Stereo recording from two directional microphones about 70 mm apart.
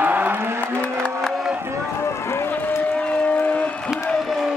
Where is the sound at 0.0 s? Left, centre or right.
Right.